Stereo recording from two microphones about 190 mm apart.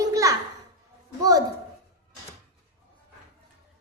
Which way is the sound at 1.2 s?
20° right (ahead or behind).